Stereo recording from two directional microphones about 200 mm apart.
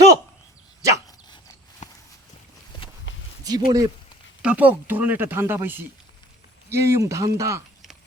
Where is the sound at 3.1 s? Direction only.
65° left (ahead or behind).